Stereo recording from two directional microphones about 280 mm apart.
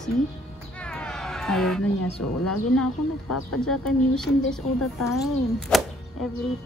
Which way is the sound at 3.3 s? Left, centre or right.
Left.